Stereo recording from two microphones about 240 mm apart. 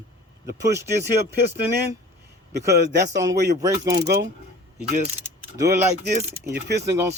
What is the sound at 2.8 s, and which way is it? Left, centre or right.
Speech, right.